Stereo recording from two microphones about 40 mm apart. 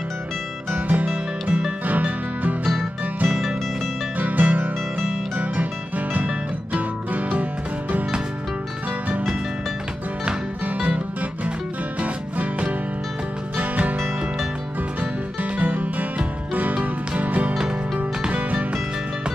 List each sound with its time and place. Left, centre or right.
0.7 s music: right
1.0 s music: right
4.2 s music: right
12.0 s music: right
15.5 s music: right